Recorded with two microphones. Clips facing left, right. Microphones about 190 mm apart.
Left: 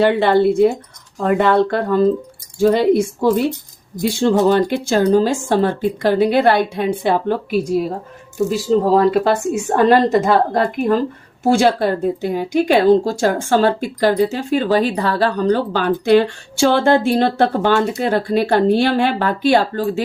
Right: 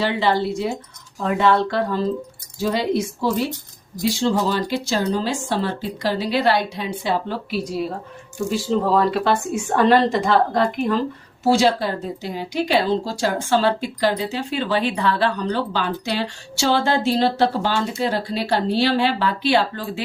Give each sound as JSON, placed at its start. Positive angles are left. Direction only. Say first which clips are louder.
{"t": 0.0, "sound": "speech", "louder": "left 7 dB", "side_deg": 55}
{"t": 8.4, "sound": "speech", "louder": "left 4 dB", "side_deg": 40}